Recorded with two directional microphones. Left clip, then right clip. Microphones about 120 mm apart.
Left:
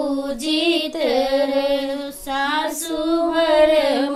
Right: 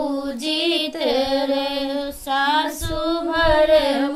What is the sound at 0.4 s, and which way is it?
Female singing, 15° right (ahead or behind).